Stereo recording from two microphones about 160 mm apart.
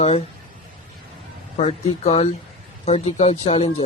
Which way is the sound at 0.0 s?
40° left (ahead or behind).